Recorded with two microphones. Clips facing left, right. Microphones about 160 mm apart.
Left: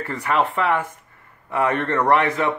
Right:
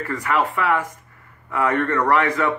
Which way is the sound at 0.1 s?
25° left (ahead or behind).